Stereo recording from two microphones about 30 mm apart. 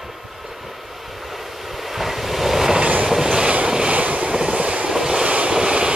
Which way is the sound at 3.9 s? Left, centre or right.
Right.